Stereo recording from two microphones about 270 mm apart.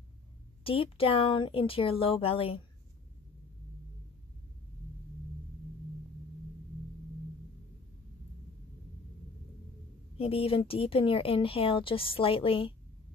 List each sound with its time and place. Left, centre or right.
0.7 s speech: centre
10.1 s speech: left